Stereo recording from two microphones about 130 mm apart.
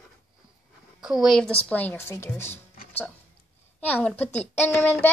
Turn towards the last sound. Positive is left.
turn(degrees=15)  # may be behind; listen again after turning